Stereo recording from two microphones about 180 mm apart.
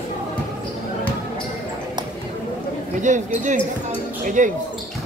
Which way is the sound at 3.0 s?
45° right (ahead or behind).